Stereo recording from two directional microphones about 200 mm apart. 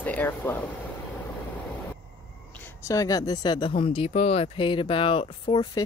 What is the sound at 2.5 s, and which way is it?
Speech, 10° left (ahead or behind).